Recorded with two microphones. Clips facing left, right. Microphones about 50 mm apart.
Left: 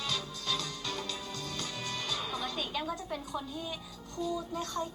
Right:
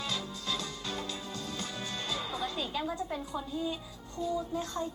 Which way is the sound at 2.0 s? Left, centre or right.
Right.